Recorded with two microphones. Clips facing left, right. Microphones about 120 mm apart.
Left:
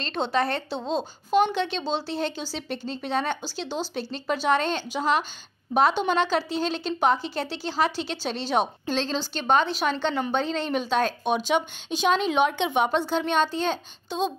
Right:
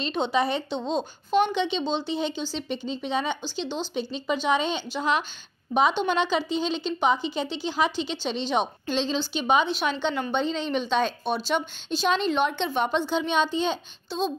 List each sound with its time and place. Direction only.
0.0 s a woman's voice: 5° right (ahead or behind)
14.0 s speech: 50° left (ahead or behind)